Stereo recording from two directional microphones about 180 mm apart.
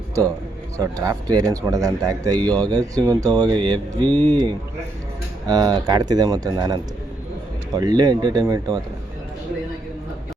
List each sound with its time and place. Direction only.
0.8 s a man's voice: 20° right (ahead or behind)
7.8 s a man's voice: 20° right (ahead or behind)